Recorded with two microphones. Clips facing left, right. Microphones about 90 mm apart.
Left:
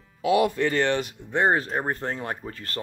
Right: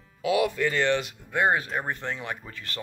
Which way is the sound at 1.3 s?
35° left (ahead or behind).